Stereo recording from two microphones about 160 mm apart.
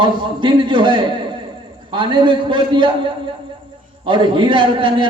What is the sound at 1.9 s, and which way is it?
A man's voice, 30° right (ahead or behind).